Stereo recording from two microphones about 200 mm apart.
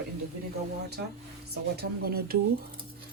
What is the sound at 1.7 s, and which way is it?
Speech, 50° right (ahead or behind).